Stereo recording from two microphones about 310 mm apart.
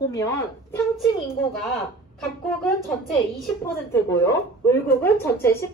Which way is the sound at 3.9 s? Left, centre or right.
Centre.